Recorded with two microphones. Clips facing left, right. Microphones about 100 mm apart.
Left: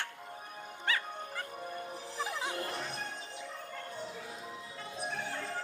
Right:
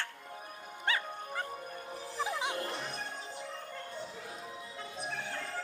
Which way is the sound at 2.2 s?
10° right (ahead or behind).